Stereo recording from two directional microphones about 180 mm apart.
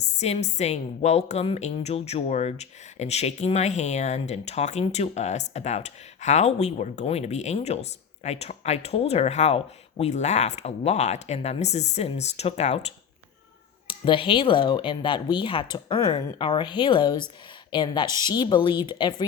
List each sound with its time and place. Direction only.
0.0 s a woman's voice: 40° left (ahead or behind)
13.8 s speech: 30° left (ahead or behind)